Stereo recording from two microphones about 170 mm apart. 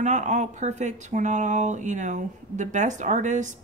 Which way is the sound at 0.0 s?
45° right (ahead or behind).